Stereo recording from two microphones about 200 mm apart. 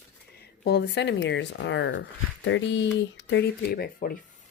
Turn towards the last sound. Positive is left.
turn(degrees=50)  # may be behind; listen again after turning